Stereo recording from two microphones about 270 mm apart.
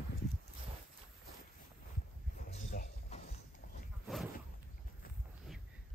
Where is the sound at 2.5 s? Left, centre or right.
Left.